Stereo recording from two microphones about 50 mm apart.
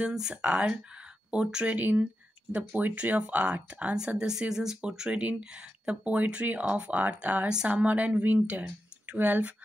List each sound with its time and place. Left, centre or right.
0.1 s speech: centre; by 3.9 s right
4.2 s speech: centre; by 9.5 s right